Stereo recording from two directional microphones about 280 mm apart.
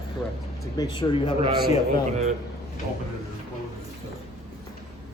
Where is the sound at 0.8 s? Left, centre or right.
Centre.